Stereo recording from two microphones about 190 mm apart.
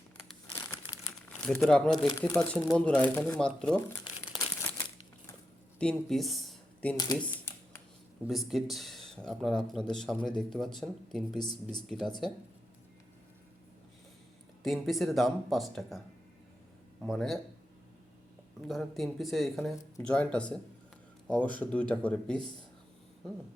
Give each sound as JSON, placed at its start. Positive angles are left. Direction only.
{"t": 0.5, "sound": "crumpling", "side_deg": 15}
{"t": 1.6, "sound": "speech", "side_deg": 5}
{"t": 2.0, "sound": "speech", "side_deg": 20}
{"t": 2.5, "sound": "speech", "side_deg": 0}
{"t": 4.4, "sound": "crumpling", "side_deg": 15}
{"t": 5.8, "sound": "speech", "side_deg": 5}
{"t": 8.2, "sound": "speech", "side_deg": 0}
{"t": 14.6, "sound": "speech", "side_deg": 0}
{"t": 17.1, "sound": "speech", "side_deg": 0}
{"t": 18.7, "sound": "speech", "side_deg": 0}
{"t": 21.6, "sound": "speech", "side_deg": 5}